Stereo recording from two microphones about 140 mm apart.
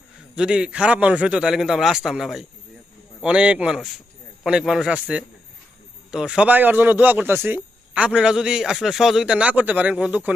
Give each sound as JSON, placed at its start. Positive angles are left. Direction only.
{"t": 0.3, "sound": "a man's voice", "side_deg": -5}